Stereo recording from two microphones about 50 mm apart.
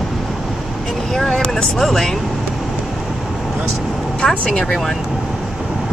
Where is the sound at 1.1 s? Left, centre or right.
Centre.